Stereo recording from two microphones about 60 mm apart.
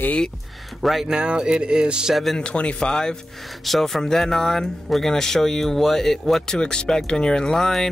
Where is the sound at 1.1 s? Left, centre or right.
Centre.